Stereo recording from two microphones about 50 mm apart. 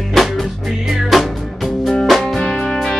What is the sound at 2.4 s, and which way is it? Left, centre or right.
Music, centre.